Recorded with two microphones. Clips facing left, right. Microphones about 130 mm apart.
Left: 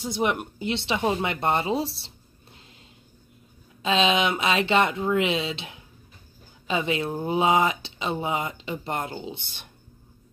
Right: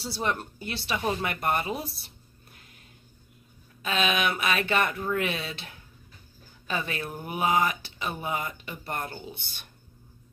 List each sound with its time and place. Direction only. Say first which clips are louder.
0.0 s speech: left 5 dB; 15° left (ahead or behind)
3.8 s speech: left 5 dB; 25° left (ahead or behind)